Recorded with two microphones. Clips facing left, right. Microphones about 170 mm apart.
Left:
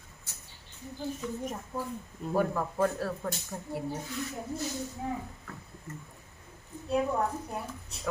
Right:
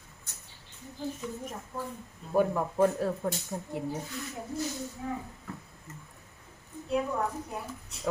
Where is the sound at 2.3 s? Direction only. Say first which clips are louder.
Right 3 dB; 15° right (ahead or behind).